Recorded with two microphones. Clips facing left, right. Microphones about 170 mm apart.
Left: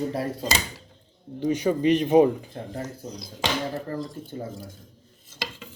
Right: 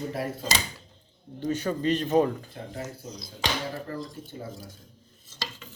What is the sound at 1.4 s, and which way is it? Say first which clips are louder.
Speech: left 5 dB; 10° left (ahead or behind).